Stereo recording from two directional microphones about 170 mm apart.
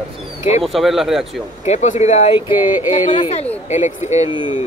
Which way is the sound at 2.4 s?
10° right (ahead or behind).